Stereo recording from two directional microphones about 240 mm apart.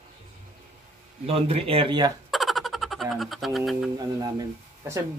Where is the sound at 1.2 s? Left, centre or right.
Right.